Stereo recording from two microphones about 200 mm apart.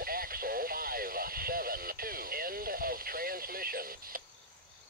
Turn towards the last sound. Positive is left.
turn(degrees=-45)  # may be behind; listen again after turning